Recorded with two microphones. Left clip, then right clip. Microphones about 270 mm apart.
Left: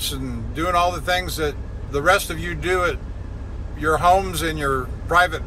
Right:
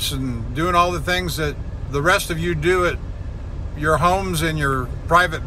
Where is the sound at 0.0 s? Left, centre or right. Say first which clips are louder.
Right 2 dB; centre.